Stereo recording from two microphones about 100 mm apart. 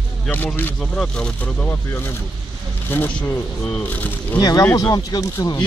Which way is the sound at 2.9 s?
20° left (ahead or behind).